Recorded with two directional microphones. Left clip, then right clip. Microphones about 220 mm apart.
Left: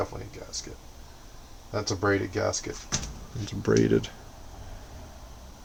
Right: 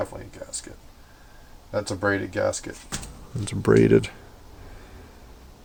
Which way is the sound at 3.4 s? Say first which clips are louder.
Right 6 dB; 40° right (ahead or behind).